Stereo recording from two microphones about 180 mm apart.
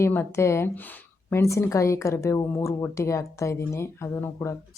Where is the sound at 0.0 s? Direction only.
15° left (ahead or behind).